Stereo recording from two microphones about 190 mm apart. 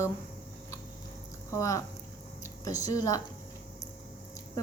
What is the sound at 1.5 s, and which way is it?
A woman's voice, 15° left (ahead or behind).